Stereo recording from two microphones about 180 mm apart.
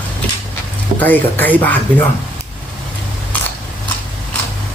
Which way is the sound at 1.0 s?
10° left (ahead or behind).